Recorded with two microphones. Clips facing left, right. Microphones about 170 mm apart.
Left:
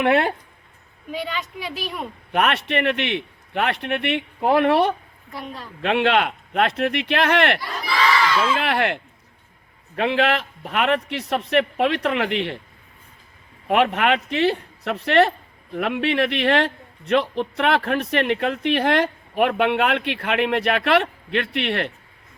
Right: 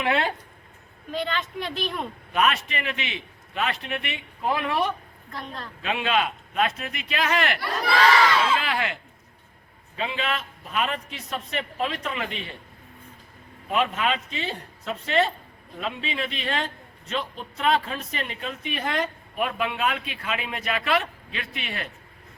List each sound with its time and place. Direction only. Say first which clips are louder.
0.0 s a man's voice: left 6 dB; 60° left (ahead or behind)
1.1 s speech: even; 5° left (ahead or behind)
2.3 s a man's voice: left 4 dB; 65° left (ahead or behind)
5.3 s a woman's voice: left 3 dB; 10° left (ahead or behind)
5.8 s a man's voice: left 6 dB; 65° left (ahead or behind)
13.7 s a man's voice: left 6 dB; 70° left (ahead or behind)